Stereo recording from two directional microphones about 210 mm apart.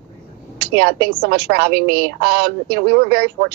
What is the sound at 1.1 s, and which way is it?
Speech, 45° right (ahead or behind).